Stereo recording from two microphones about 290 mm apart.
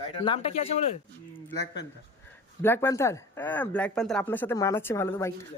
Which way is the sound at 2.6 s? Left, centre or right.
Centre.